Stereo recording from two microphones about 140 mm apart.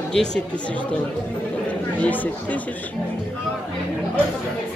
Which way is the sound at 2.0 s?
10° left (ahead or behind).